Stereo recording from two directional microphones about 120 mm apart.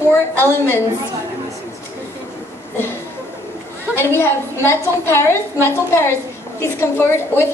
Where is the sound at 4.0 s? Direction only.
20° left (ahead or behind).